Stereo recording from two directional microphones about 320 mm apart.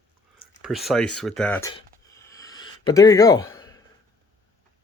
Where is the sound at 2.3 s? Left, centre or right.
Centre.